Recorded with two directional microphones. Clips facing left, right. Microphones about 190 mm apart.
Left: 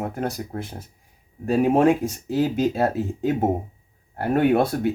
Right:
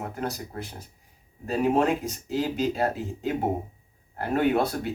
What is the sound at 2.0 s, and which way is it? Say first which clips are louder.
Speech: left 5 dB; 50° left (ahead or behind).